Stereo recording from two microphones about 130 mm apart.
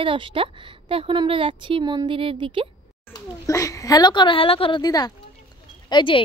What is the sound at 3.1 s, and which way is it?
Speech, 25° left (ahead or behind).